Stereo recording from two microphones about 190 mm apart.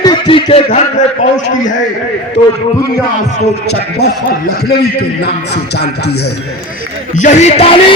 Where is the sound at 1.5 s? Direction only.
40° left (ahead or behind).